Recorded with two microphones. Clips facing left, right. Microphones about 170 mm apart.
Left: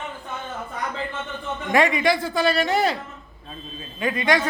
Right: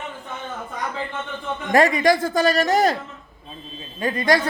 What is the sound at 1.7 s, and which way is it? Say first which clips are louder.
A man's voice: right 3 dB; 40° right (ahead or behind).